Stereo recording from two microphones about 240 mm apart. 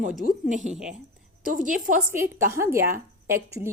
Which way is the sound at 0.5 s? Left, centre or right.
Right.